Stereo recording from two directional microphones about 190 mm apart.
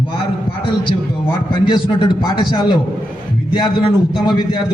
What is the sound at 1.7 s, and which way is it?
A man's voice, 25° left (ahead or behind).